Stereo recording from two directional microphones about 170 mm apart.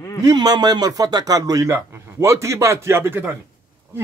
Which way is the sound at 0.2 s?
20° right (ahead or behind).